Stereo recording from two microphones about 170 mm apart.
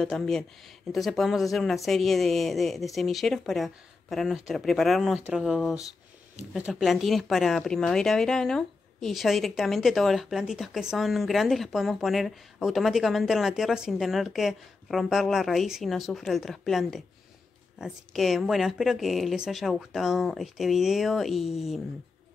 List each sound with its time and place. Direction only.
0.0 s a woman's voice: 5° left (ahead or behind)